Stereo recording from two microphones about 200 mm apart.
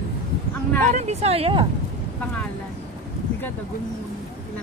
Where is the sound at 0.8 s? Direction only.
35° right (ahead or behind).